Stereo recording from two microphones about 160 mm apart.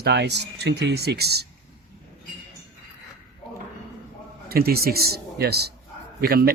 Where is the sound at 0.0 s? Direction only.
90° right.